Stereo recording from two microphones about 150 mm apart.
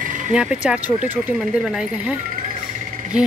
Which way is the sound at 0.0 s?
60° right (ahead or behind).